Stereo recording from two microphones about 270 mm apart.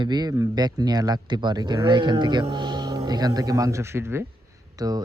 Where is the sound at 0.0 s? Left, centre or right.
Centre.